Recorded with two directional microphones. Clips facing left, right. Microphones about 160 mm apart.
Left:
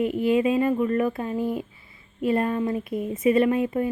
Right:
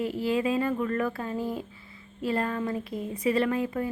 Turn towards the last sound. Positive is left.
turn(degrees=20)  # may be behind; listen again after turning